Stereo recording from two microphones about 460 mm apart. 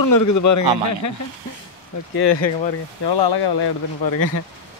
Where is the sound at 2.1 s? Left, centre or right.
Left.